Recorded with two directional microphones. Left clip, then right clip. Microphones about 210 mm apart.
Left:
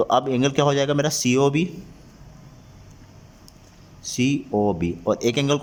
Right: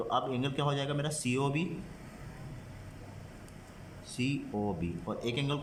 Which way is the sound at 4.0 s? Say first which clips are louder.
Left 12 dB; 40° left (ahead or behind).